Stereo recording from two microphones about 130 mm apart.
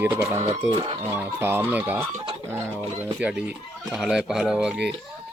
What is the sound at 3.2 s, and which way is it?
Speech, 5° right (ahead or behind).